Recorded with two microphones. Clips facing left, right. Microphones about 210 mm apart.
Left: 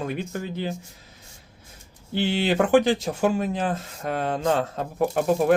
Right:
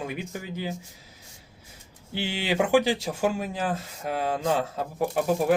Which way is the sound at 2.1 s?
10° right (ahead or behind).